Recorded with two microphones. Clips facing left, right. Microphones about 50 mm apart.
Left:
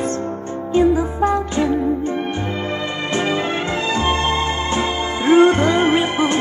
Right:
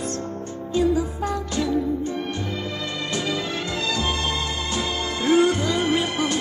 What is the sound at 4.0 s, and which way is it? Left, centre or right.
Music, left.